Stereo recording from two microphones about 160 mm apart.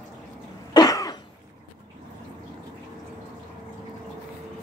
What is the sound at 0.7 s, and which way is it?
Cough, 25° left (ahead or behind).